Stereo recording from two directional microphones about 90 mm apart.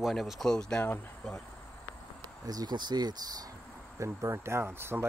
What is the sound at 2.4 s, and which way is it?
Speech, 50° right (ahead or behind).